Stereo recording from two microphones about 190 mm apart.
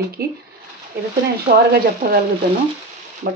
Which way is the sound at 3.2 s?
50° right (ahead or behind).